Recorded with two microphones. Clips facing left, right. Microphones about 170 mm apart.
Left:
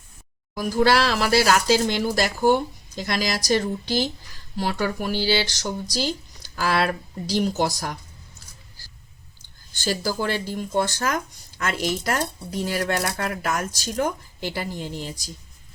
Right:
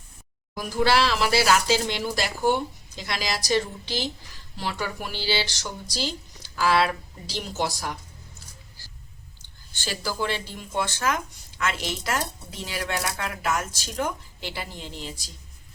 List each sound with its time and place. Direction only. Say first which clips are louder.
0.5 s speech: left 3 dB; 40° left (ahead or behind)
9.8 s speech: left 4 dB; 40° left (ahead or behind)